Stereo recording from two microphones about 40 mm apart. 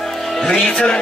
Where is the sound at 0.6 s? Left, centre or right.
Left.